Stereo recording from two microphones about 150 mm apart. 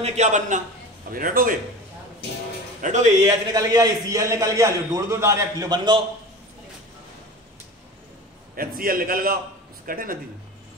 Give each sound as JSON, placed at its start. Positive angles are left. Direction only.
{"t": 0.0, "sound": "a man's voice", "side_deg": -50}
{"t": 1.1, "sound": "a man's voice", "side_deg": -70}
{"t": 2.8, "sound": "speech", "side_deg": -50}
{"t": 3.3, "sound": "a man's voice", "side_deg": -25}
{"t": 8.5, "sound": "a man's voice", "side_deg": -75}